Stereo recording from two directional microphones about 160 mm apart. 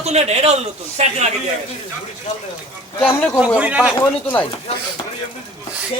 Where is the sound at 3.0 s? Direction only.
10° left (ahead or behind).